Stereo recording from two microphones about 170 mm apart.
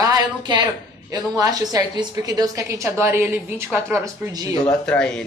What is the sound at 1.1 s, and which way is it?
A woman's voice, 20° right (ahead or behind).